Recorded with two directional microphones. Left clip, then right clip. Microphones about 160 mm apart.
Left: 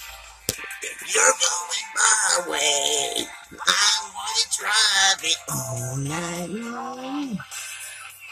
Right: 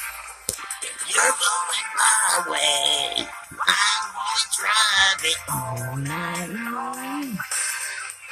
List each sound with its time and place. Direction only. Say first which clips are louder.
1.1 s music: even; 5° right (ahead or behind)
5.8 s music: right 1 dB; 25° right (ahead or behind)